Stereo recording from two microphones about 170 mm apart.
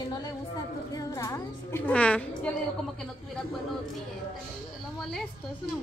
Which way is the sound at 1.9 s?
5° left (ahead or behind).